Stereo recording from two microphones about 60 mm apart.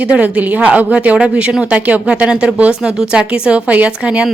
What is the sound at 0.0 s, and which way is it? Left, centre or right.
Speech, right.